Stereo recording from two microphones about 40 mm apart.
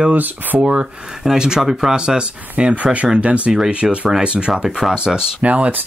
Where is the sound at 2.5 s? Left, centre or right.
Right.